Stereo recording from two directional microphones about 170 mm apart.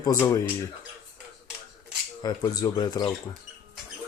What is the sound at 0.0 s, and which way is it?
Speech, 20° left (ahead or behind).